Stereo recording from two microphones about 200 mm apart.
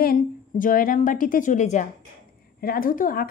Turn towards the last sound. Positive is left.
turn(degrees=45)  # may be behind; listen again after turning